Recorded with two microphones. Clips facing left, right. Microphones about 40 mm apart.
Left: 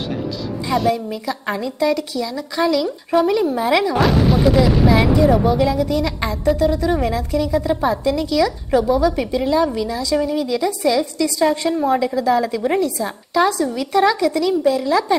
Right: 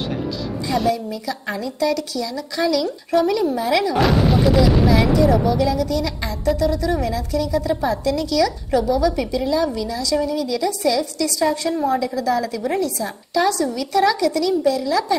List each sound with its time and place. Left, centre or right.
1.2 s a woman's voice: left
4.0 s speech: centre
4.8 s a woman's voice: left